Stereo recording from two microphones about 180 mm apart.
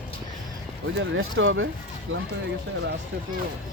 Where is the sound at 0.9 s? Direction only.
90° right.